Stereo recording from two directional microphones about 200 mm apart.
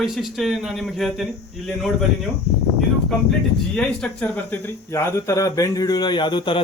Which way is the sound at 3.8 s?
5° left (ahead or behind).